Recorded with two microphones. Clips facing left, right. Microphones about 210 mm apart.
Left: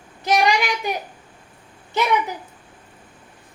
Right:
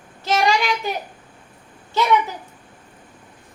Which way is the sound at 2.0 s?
20° left (ahead or behind).